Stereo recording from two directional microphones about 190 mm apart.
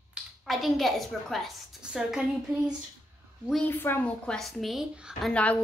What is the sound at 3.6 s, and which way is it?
A woman's voice, 10° left (ahead or behind).